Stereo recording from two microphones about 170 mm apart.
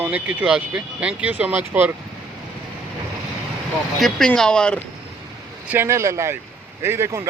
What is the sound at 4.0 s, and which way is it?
Speech, 5° left (ahead or behind).